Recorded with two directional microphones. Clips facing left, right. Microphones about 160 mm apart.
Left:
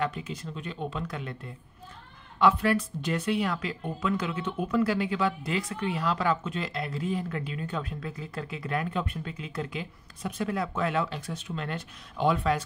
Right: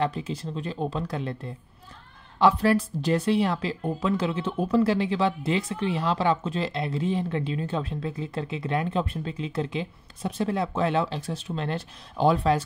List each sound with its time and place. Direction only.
0.0 s speech: 30° right (ahead or behind)